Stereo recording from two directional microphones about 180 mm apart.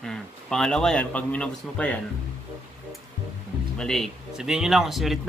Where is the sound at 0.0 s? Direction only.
5° left (ahead or behind).